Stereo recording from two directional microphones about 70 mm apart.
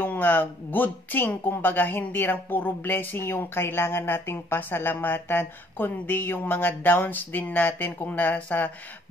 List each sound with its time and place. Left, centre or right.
0.0 s speech: left